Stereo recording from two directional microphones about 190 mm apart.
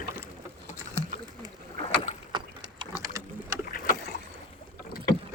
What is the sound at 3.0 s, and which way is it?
Sewing machine, 15° right (ahead or behind).